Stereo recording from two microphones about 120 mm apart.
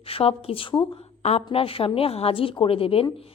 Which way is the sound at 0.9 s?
60° left (ahead or behind).